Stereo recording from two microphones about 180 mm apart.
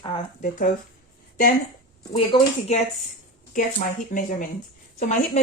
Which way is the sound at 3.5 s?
45° left (ahead or behind).